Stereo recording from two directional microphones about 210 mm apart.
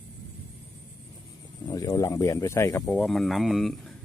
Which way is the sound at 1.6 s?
15° left (ahead or behind).